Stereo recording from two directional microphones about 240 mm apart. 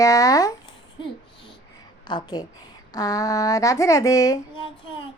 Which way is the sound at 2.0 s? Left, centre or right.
Centre.